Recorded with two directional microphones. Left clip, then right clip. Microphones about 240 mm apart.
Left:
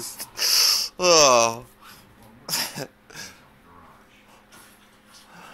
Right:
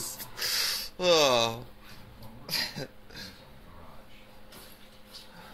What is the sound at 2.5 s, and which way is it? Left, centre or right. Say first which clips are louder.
Throat clearing: left 4 dB; left.